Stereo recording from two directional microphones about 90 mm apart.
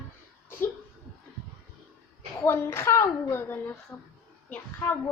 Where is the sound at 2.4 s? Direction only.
25° left (ahead or behind).